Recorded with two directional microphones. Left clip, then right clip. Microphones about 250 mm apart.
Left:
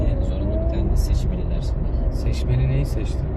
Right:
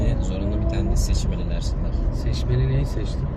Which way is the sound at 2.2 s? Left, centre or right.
Centre.